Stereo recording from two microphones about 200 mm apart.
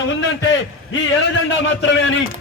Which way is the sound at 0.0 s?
65° left (ahead or behind).